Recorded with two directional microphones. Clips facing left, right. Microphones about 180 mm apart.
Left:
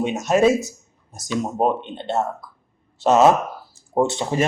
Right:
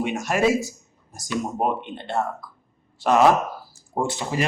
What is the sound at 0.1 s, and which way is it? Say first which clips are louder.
Speech: left 5 dB; 20° left (ahead or behind).